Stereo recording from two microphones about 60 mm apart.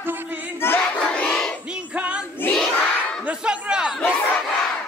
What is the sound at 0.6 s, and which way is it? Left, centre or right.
Crowd, left.